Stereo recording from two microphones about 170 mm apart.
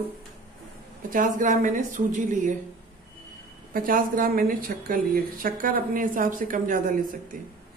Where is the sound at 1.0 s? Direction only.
50° right (ahead or behind).